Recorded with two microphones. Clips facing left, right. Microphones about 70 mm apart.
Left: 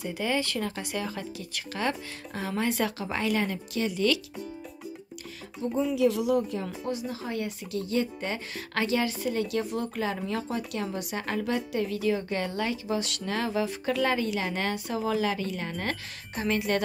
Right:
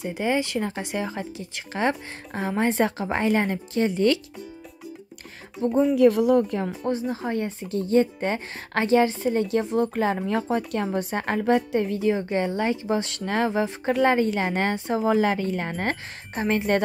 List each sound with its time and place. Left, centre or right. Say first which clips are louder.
0.0 s a woman's voice: right 4 dB; right
5.6 s a woman's voice: right 7 dB; right